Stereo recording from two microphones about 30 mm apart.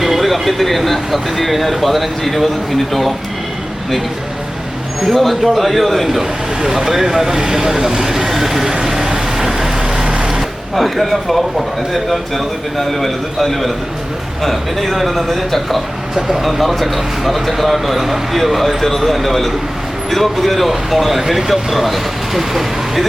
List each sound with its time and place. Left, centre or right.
0.2 s speech: centre
5.1 s speech: centre
6.6 s speech: centre
9.0 s vehicle: centre
10.0 s vehicle: right
10.8 s speech: centre
12.7 s speech: centre